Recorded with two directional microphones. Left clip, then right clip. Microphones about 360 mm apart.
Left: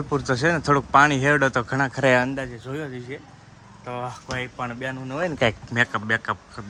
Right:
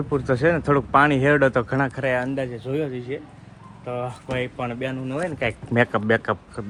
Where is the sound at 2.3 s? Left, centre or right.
Centre.